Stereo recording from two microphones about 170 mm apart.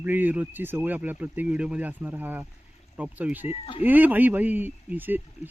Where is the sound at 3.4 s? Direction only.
35° left (ahead or behind).